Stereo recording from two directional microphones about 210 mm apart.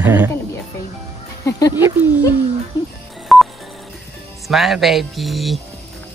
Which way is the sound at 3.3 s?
Centre (ahead or behind).